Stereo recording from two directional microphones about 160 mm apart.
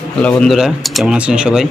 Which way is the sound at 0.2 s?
5° left (ahead or behind).